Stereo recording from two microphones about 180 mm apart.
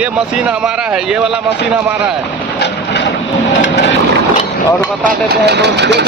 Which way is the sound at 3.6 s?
70° left (ahead or behind).